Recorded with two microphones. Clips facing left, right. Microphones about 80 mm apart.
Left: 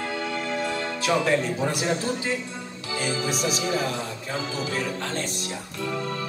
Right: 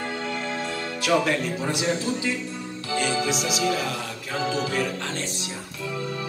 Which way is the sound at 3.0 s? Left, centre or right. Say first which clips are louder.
Right 3 dB; right.